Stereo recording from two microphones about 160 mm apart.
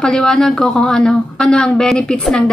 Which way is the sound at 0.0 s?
5° left (ahead or behind).